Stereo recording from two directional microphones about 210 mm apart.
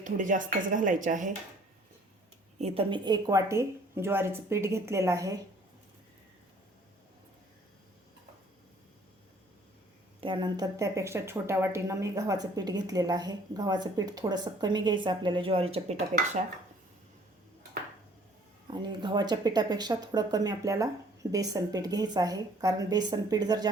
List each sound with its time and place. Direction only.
0.0 s speech: 40° right (ahead or behind)
2.6 s speech: 30° right (ahead or behind)
10.2 s a woman's voice: 25° right (ahead or behind)
18.7 s speech: 20° right (ahead or behind)